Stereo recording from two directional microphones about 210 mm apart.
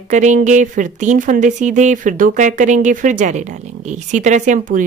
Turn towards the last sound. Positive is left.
turn(degrees=-35)  # may be behind; listen again after turning